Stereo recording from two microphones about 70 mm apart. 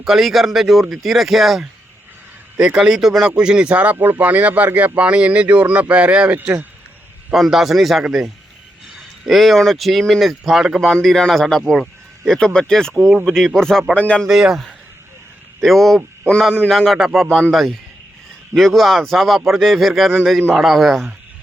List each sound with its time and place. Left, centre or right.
0.0 s speech: centre
3.9 s speech: right
7.3 s speech: centre
9.2 s speech: centre
11.6 s a sound: centre
12.5 s speech: centre
13.9 s speech: centre
14.3 s speech: centre